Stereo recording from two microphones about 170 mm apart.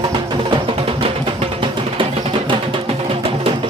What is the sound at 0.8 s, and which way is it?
Music, 35° right (ahead or behind).